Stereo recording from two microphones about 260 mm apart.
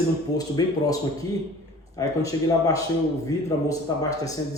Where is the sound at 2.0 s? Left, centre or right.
Centre.